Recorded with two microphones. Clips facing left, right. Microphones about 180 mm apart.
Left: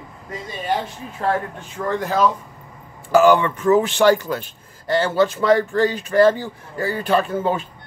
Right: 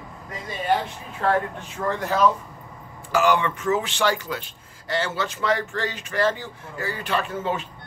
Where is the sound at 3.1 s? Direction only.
40° left (ahead or behind).